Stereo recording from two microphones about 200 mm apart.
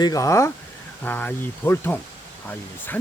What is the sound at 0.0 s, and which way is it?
Speech, 15° left (ahead or behind).